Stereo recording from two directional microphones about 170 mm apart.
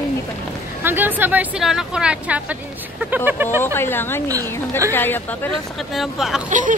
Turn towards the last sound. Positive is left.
turn(degrees=-50)  # may be behind; listen again after turning